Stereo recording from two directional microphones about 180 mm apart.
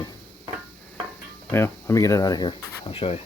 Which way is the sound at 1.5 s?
15° left (ahead or behind).